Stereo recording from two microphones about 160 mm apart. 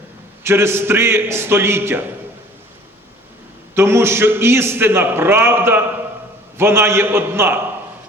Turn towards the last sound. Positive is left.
turn(degrees=-15)  # may be behind; listen again after turning